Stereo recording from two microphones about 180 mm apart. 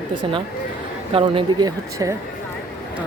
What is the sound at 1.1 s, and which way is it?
Speech, 30° right (ahead or behind).